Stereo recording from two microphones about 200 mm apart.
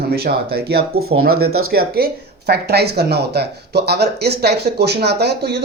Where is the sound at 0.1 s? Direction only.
50° right (ahead or behind).